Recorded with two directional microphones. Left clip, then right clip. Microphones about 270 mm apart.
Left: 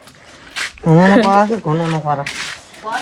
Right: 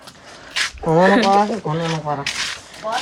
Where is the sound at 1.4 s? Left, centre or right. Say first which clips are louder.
Left 4 dB; left.